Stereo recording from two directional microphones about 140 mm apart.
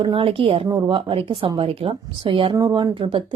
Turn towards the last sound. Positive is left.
turn(degrees=-40)  # may be behind; listen again after turning